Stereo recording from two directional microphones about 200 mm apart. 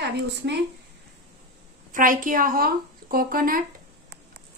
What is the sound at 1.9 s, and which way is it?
A woman's voice, 40° right (ahead or behind).